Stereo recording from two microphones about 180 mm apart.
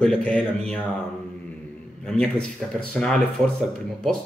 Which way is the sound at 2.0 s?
5° left (ahead or behind).